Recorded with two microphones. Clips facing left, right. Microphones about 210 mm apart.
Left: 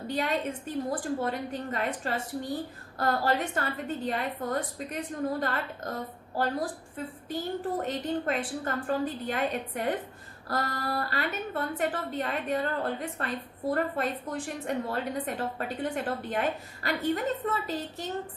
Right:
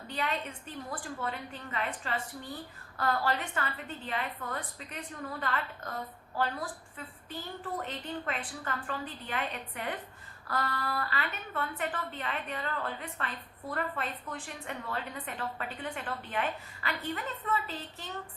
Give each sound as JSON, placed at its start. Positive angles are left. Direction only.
{"t": 0.1, "sound": "a woman's voice", "side_deg": 40}